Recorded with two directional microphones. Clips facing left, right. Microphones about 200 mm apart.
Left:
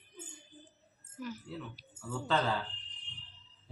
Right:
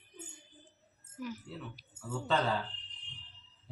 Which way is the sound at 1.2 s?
15° right (ahead or behind).